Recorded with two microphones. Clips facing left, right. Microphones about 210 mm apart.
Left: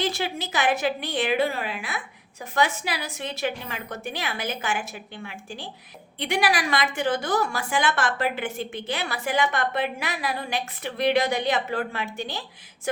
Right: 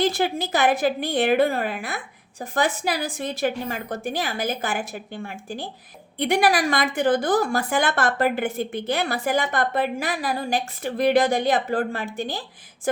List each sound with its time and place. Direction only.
0.1 s a woman's voice: 55° right (ahead or behind); by 4.1 s 35° right (ahead or behind)
4.1 s a woman's voice: 45° right (ahead or behind)